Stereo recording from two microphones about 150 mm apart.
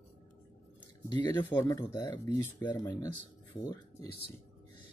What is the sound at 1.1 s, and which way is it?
Speech, 25° left (ahead or behind).